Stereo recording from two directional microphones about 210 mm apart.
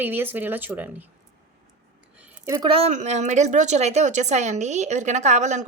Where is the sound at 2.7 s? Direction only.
30° right (ahead or behind).